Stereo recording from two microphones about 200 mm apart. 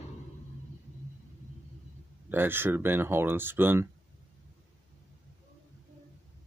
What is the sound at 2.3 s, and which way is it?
Speech, 10° right (ahead or behind).